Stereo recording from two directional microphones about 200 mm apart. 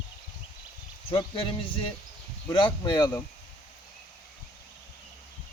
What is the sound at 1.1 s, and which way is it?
Speech, 25° left (ahead or behind).